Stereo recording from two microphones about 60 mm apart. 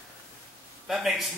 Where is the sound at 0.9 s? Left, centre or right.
Centre.